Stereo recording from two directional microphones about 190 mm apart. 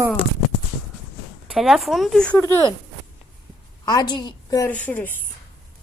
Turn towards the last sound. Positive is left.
turn(degrees=10)  # may be behind; listen again after turning